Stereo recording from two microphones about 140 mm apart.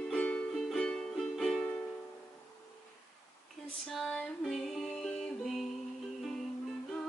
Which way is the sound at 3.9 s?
Centre (ahead or behind).